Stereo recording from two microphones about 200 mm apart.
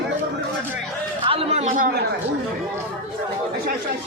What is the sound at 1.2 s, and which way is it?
Speech, 25° right (ahead or behind).